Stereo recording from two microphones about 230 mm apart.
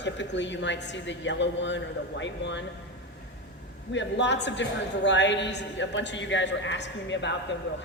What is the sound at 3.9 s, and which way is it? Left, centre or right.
A man's voice, left.